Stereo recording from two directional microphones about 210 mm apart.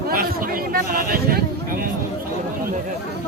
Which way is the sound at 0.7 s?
45° right (ahead or behind).